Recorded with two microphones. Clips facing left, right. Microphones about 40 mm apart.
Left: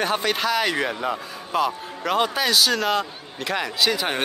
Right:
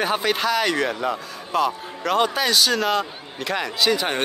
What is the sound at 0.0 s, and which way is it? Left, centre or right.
A man's voice, centre.